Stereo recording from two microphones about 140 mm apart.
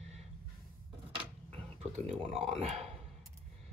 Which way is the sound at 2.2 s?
45° right (ahead or behind).